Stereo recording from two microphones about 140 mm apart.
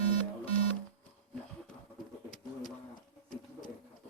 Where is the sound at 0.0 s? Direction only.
45° left (ahead or behind).